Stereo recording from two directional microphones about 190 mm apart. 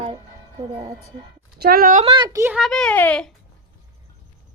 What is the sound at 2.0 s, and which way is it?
Speech, 25° right (ahead or behind).